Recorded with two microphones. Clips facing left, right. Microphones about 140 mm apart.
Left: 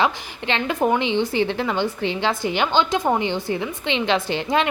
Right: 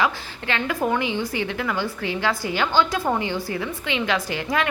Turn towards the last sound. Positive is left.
turn(degrees=25)  # may be behind; listen again after turning